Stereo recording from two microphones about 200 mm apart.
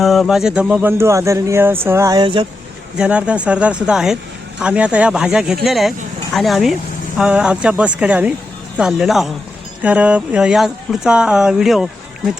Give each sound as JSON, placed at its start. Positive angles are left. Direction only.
{"t": 0.0, "sound": "speech", "side_deg": 0}
{"t": 3.0, "sound": "speech", "side_deg": -5}